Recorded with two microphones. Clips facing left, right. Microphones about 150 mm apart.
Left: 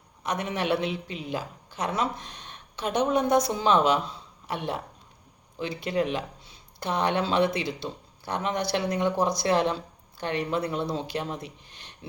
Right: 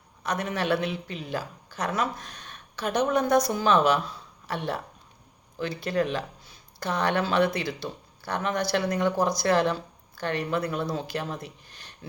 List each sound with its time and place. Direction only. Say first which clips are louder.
0.2 s speech: even; 20° left (ahead or behind)